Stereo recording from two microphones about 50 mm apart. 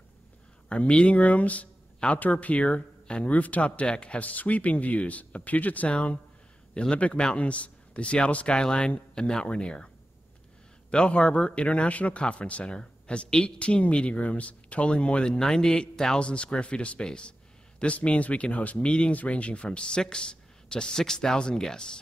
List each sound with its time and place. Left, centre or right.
0.7 s speech: left
10.9 s speech: left